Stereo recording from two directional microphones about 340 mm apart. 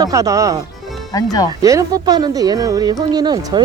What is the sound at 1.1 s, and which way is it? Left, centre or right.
Speech, centre.